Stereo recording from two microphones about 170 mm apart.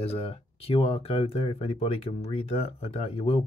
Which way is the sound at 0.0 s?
35° left (ahead or behind).